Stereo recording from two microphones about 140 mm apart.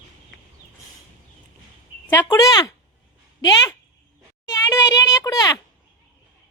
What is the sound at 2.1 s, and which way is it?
Speech, 20° left (ahead or behind).